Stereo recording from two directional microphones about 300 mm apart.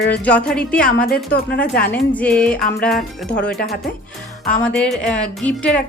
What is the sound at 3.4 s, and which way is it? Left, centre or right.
Speech, left.